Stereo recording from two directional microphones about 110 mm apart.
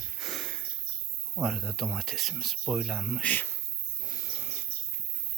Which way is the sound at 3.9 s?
35° left (ahead or behind).